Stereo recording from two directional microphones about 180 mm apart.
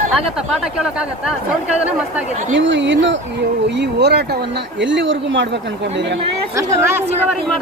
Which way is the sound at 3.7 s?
70° right (ahead or behind).